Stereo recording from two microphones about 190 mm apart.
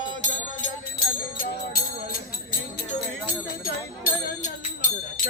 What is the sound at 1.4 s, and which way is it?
Music, 50° left (ahead or behind).